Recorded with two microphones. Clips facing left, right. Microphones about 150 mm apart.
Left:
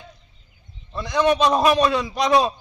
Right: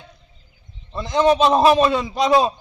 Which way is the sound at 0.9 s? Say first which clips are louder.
Right 3 dB; 25° right (ahead or behind).